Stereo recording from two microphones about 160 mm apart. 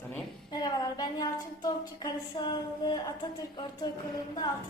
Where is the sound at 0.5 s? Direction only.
25° left (ahead or behind).